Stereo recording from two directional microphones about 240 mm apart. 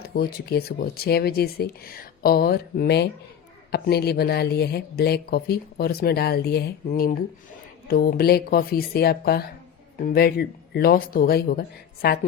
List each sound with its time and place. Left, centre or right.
0.1 s speech: left